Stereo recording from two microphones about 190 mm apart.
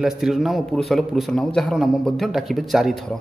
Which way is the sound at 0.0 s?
Centre (ahead or behind).